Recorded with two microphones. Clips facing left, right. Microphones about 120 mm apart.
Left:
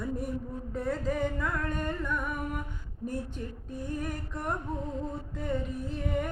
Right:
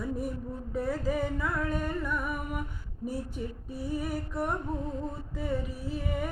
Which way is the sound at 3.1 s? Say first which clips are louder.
Right 1 dB; 10° right (ahead or behind).